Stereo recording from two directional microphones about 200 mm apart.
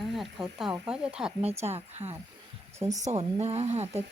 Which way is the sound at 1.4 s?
30° right (ahead or behind).